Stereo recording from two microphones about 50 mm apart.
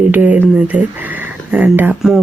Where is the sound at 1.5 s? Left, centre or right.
Right.